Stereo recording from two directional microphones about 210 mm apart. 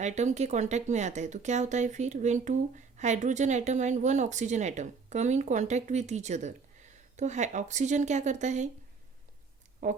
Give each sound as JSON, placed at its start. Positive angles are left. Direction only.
{"t": 0.0, "sound": "speech", "side_deg": -35}
{"t": 9.8, "sound": "speech", "side_deg": -35}